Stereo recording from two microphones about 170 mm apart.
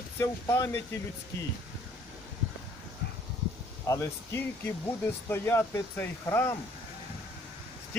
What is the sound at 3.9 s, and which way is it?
Speech, 15° left (ahead or behind).